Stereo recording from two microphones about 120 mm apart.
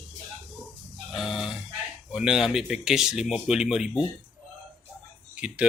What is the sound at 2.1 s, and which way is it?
Speech, 5° right (ahead or behind).